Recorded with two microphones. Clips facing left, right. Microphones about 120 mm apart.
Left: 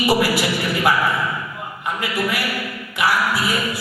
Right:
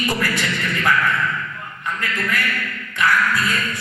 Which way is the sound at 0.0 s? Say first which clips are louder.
Left 5 dB; 10° left (ahead or behind).